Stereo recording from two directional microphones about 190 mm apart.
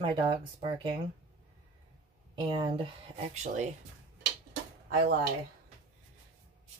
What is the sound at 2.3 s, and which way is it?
Speech, 25° right (ahead or behind).